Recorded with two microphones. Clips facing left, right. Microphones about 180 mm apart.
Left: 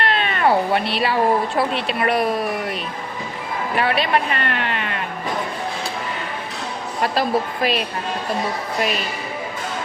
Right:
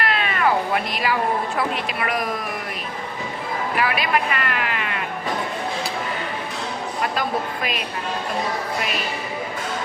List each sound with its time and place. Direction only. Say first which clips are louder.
0.0 s speech: left 2 dB; 30° left (ahead or behind)
3.8 s speech: left 3 dB; 30° left (ahead or behind)
7.0 s speech: left 5 dB; 35° left (ahead or behind)